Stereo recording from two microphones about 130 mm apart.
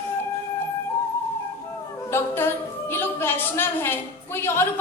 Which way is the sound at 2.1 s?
15° left (ahead or behind).